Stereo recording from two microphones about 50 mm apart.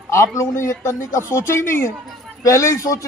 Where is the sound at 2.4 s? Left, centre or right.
Left.